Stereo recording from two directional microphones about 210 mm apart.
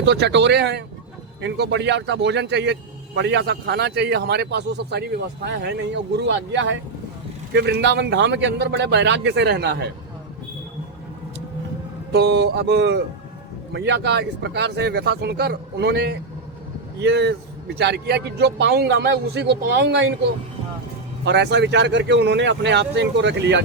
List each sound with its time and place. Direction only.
0.0 s a man's voice: 55° right (ahead or behind)
12.1 s a man's voice: 50° right (ahead or behind)
21.2 s speech: 55° right (ahead or behind)